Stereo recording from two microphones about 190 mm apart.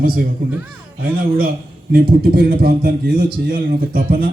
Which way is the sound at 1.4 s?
50° right (ahead or behind).